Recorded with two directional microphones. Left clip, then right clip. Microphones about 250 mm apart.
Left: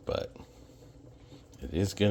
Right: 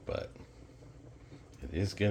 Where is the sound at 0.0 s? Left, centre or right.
Left.